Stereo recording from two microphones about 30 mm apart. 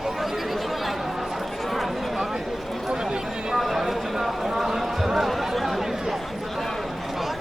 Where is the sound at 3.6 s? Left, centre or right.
Centre.